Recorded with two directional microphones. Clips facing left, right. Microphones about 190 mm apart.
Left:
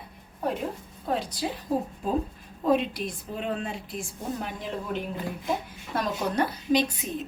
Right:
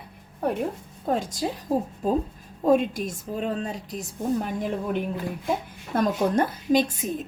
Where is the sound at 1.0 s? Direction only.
45° right (ahead or behind).